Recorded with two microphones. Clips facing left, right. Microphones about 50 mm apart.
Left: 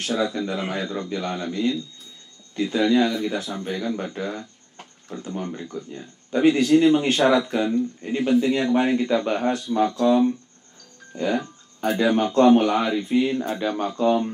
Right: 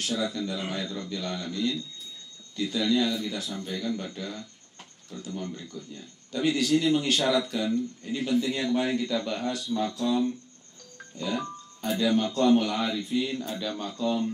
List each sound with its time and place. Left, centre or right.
0.0 s speech: left